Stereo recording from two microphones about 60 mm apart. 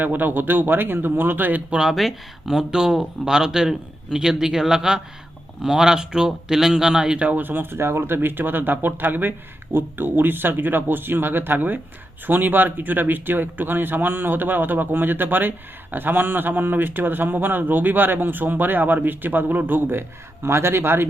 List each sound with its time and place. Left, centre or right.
0.0 s speech: right
1.7 s speech: centre
7.3 s speech: right